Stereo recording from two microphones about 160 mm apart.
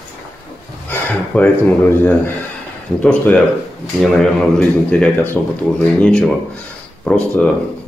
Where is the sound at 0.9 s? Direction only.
10° left (ahead or behind).